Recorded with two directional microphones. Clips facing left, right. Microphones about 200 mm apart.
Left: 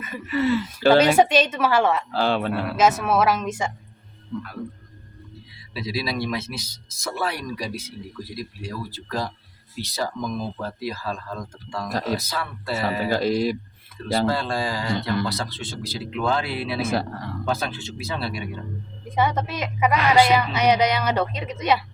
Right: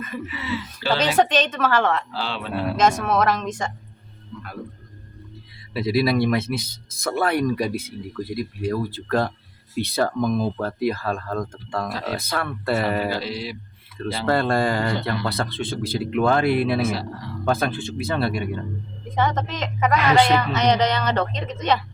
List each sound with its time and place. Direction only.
0.3 s speech: 50° left (ahead or behind)
1.0 s a woman's voice: 10° left (ahead or behind)
2.2 s speech: 50° left (ahead or behind)
2.7 s a woman's voice: 5° left (ahead or behind)
5.7 s speech: 55° right (ahead or behind)
11.9 s speech: 45° left (ahead or behind)
12.1 s speech: 55° right (ahead or behind)
13.1 s speech: 45° left (ahead or behind)
14.3 s speech: 55° right (ahead or behind)
16.8 s speech: 50° left (ahead or behind)
17.4 s speech: 55° right (ahead or behind)
19.1 s a woman's voice: 10° left (ahead or behind)